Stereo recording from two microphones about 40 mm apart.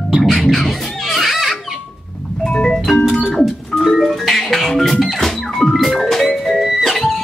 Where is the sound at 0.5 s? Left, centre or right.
Centre.